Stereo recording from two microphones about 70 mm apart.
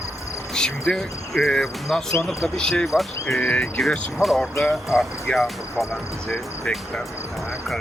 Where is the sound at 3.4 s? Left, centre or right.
Left.